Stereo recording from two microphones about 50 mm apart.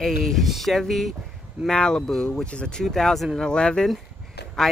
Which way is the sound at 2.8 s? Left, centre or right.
Centre.